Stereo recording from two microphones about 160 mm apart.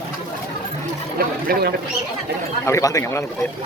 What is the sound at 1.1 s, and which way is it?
Speech, 70° right (ahead or behind).